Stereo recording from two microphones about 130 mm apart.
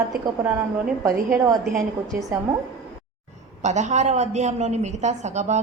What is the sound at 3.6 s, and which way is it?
A woman's voice, 65° right (ahead or behind).